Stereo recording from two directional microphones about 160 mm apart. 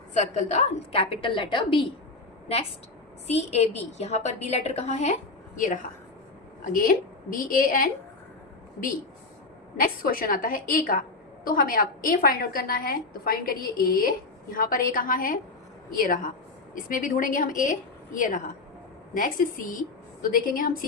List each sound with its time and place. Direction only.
0.2 s a woman's voice: 45° left (ahead or behind)
3.2 s a woman's voice: 40° left (ahead or behind); by 7.9 s 60° left (ahead or behind)
9.7 s a woman's voice: 65° left (ahead or behind)